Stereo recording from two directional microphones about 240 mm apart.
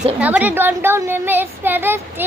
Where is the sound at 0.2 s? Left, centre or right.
Centre.